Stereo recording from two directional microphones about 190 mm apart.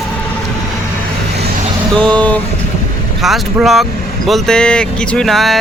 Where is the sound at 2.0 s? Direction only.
5° left (ahead or behind).